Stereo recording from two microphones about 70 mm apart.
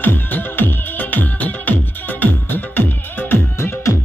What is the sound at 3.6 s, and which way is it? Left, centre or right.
Music, left.